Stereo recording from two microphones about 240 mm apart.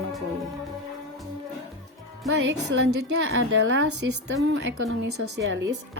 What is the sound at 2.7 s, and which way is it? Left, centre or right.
A woman's voice, right.